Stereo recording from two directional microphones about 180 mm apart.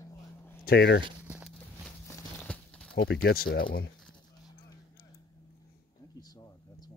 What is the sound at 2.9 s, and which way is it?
Speech, 70° left (ahead or behind).